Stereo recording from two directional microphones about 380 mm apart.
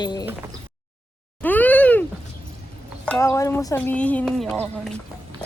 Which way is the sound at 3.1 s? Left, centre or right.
Centre.